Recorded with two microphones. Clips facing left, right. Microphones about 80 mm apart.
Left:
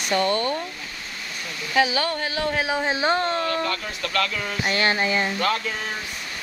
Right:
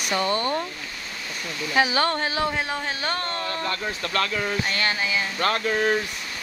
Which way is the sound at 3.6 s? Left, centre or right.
Right.